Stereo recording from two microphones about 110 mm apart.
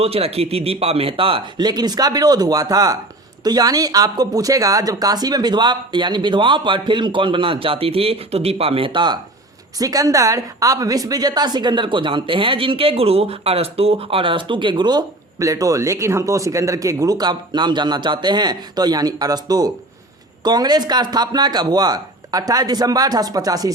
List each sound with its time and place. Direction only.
0.0 s speech: 65° right (ahead or behind)
1.6 s a woman's voice: 40° right (ahead or behind)
9.7 s a woman's voice: 30° right (ahead or behind)